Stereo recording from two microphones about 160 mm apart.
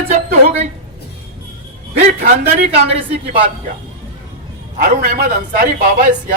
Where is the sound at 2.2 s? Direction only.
45° right (ahead or behind).